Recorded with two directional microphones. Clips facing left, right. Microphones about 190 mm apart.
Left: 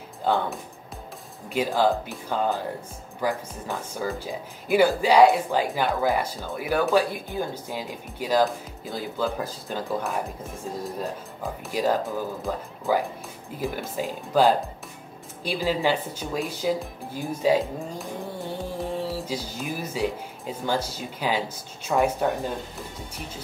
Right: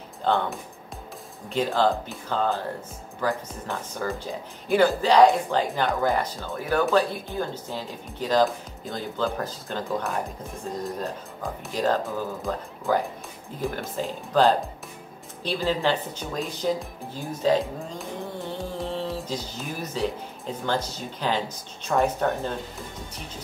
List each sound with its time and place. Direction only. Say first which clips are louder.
0.2 s speech: even; 10° left (ahead or behind)
11.7 s speech: left 1 dB; 10° left (ahead or behind)